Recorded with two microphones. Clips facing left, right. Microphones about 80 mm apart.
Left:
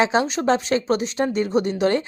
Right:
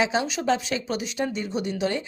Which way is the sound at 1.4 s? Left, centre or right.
Left.